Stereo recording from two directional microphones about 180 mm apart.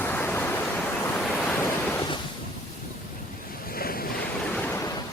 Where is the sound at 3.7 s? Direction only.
55° left (ahead or behind).